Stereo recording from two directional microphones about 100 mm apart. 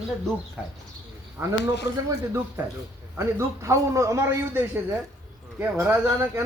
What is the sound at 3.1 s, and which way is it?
A man's voice, 30° right (ahead or behind).